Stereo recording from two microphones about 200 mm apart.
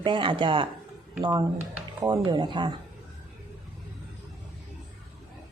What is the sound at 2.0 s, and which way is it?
Speech, 20° right (ahead or behind).